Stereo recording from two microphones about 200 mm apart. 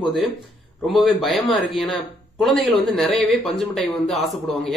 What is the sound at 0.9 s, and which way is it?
Speech, centre (ahead or behind).